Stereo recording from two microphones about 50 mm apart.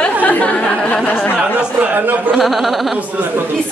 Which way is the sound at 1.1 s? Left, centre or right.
Left.